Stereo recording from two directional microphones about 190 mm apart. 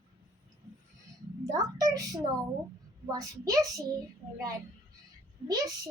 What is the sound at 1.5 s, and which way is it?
A woman's voice, 20° right (ahead or behind).